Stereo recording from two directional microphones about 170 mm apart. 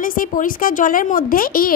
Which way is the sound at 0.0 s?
55° left (ahead or behind).